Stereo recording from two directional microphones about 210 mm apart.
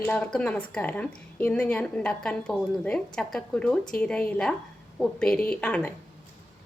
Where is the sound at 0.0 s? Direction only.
5° left (ahead or behind).